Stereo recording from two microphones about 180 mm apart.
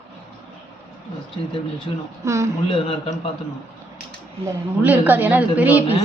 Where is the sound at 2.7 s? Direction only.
30° left (ahead or behind).